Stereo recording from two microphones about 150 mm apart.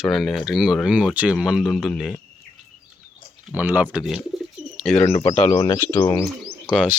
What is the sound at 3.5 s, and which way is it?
Speech, 10° right (ahead or behind).